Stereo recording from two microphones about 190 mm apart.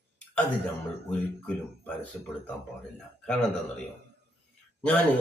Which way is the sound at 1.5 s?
10° left (ahead or behind).